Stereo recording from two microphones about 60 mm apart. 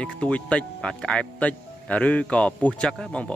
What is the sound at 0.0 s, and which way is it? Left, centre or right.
Speech, centre.